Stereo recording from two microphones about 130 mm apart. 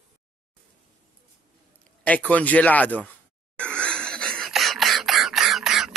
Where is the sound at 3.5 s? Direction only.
10° left (ahead or behind).